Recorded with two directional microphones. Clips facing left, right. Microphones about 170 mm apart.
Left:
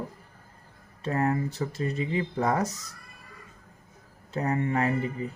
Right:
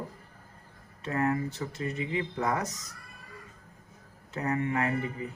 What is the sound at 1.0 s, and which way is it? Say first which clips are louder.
Speech: left 2 dB; 35° left (ahead or behind).